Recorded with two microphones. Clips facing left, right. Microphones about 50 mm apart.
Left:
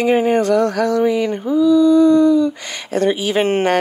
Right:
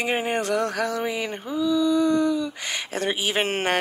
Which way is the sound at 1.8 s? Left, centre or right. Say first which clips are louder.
Left 8 dB; left.